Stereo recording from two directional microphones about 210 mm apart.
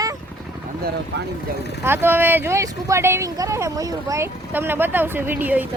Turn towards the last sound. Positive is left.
turn(degrees=-10)  # may be behind; listen again after turning